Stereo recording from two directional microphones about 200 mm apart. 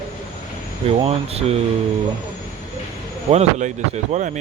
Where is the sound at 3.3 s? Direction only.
35° right (ahead or behind).